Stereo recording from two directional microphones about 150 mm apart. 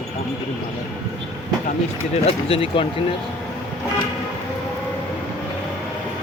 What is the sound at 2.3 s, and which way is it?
Speech, 40° left (ahead or behind).